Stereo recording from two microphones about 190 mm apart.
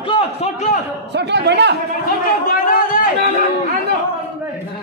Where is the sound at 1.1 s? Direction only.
60° right (ahead or behind).